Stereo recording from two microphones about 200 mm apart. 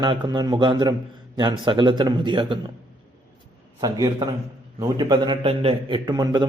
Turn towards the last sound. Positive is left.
turn(degrees=-20)  # may be behind; listen again after turning